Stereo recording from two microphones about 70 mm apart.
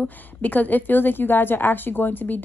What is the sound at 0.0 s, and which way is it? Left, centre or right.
A woman's voice, left.